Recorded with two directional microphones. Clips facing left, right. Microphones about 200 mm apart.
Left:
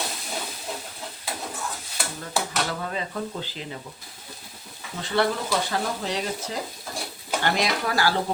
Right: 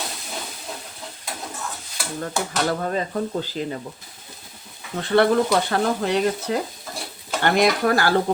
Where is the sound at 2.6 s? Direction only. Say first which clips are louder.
Right 7 dB; 45° right (ahead or behind).